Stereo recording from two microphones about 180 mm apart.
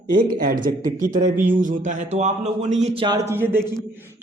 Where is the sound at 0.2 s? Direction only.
50° right (ahead or behind).